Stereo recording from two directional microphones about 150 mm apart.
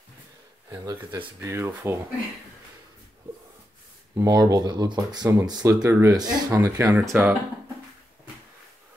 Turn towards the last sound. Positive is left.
turn(degrees=-15)  # may be behind; listen again after turning